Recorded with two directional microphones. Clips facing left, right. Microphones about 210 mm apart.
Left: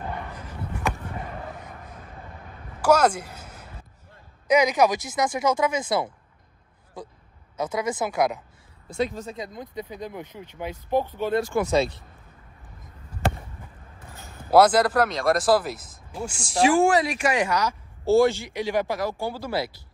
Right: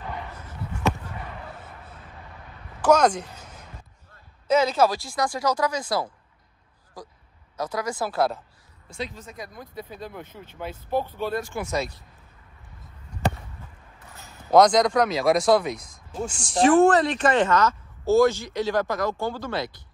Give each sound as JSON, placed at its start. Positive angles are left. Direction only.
{"t": 2.8, "sound": "a sound", "side_deg": 5}
{"t": 4.5, "sound": "speech", "side_deg": 15}
{"t": 7.5, "sound": "speech", "side_deg": 20}
{"t": 8.9, "sound": "speech", "side_deg": 50}
{"t": 9.2, "sound": "speech", "side_deg": 25}
{"t": 11.4, "sound": "speech", "side_deg": 50}
{"t": 14.5, "sound": "speech", "side_deg": 5}